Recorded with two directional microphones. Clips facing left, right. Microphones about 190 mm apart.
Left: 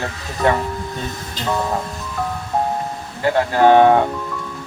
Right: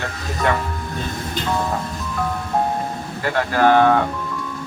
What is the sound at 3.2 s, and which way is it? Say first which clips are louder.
Speech: left 3 dB; 25° left (ahead or behind).